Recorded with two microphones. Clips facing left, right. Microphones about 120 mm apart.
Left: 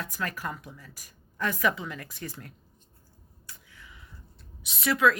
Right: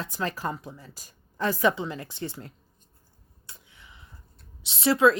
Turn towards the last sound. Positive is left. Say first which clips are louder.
# right 4 dB
turn(degrees=-30)  # may be behind; listen again after turning